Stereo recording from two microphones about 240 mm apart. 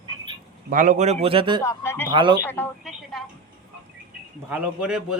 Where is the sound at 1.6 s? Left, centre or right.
Centre.